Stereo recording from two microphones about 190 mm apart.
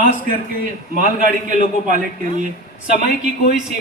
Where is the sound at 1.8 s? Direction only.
40° right (ahead or behind).